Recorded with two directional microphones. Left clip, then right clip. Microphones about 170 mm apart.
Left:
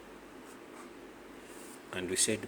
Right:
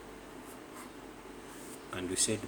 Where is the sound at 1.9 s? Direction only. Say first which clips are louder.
Left 2 dB; 40° left (ahead or behind).